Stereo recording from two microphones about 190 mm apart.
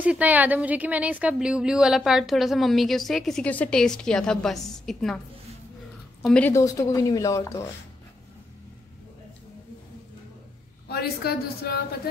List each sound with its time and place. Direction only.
0.0 s speech: 10° right (ahead or behind)
6.2 s speech: 5° left (ahead or behind)
6.5 s speech: 15° left (ahead or behind)
10.9 s a woman's voice: 55° left (ahead or behind)